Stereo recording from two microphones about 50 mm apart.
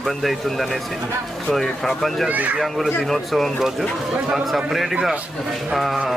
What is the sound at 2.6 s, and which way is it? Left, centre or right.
Speech, centre.